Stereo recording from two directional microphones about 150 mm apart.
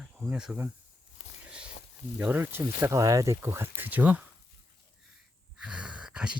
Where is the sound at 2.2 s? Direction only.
10° right (ahead or behind).